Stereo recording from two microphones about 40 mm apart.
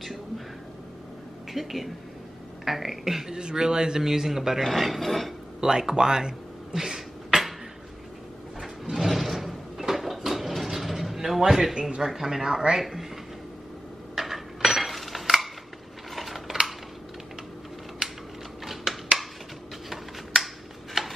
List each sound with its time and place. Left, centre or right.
1.5 s a woman's voice: centre
3.3 s a man's voice: centre
5.6 s speech: centre
8.8 s a sound: centre
12.1 s a man's voice: centre
14.1 s dishes: centre
16.2 s a sound: centre
18.0 s typing: centre
21.0 s a sound: centre